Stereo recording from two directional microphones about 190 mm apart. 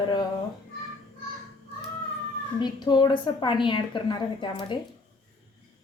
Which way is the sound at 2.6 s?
25° left (ahead or behind).